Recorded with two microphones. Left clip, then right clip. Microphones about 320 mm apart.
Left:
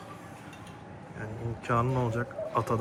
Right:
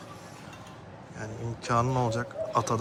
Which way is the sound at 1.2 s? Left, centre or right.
Centre.